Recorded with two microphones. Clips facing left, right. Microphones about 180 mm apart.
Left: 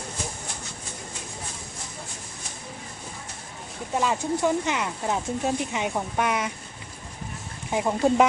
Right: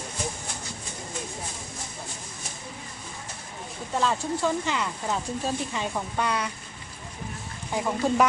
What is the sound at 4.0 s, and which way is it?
Speech, 15° left (ahead or behind).